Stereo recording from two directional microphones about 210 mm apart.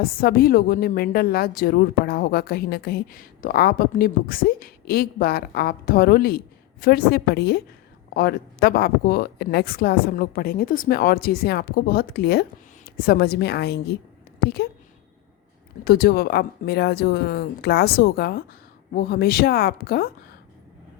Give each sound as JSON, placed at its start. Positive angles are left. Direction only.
{"t": 0.0, "sound": "a woman's voice", "side_deg": 45}
{"t": 15.8, "sound": "a woman's voice", "side_deg": 50}